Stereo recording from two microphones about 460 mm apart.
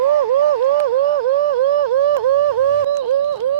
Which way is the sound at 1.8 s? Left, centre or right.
Right.